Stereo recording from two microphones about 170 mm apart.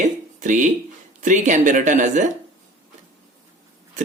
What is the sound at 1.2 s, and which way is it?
Speech, 45° right (ahead or behind).